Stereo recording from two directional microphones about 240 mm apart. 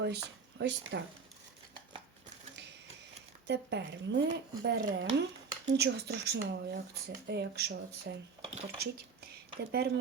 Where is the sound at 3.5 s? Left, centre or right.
Right.